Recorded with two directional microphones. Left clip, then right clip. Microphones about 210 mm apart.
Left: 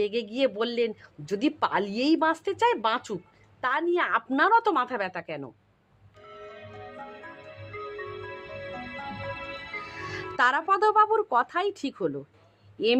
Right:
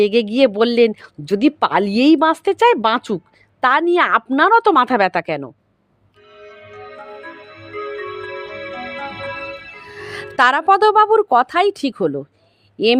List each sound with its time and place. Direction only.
0.0 s a woman's voice: 40° right (ahead or behind)
6.4 s music: 30° right (ahead or behind)
10.0 s speech: 40° right (ahead or behind)